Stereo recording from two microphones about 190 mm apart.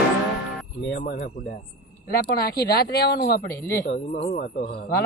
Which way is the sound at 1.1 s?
50° left (ahead or behind).